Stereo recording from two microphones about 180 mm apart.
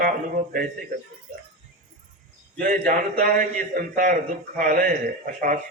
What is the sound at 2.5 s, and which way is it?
A man's voice, 50° right (ahead or behind).